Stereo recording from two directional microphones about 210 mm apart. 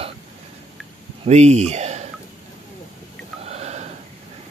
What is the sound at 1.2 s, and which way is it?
Speech, 30° right (ahead or behind).